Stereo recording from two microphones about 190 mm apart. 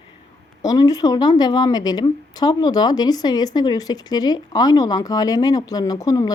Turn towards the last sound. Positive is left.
turn(degrees=20)  # may be behind; listen again after turning